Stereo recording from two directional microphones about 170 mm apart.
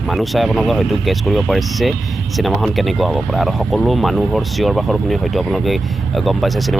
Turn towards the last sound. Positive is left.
turn(degrees=0)  # may be behind; listen again after turning